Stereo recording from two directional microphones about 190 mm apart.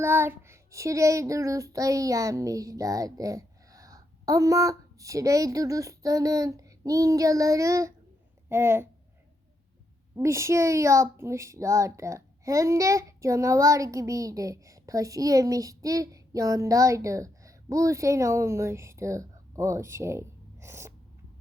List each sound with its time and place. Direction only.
0.0 s a child's voice: 10° right (ahead or behind)
10.2 s a child's voice: 15° right (ahead or behind)